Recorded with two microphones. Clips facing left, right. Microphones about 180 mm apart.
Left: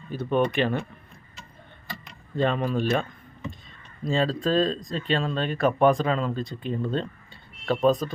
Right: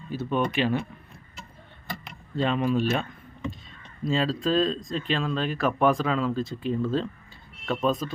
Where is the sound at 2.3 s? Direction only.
45° left (ahead or behind).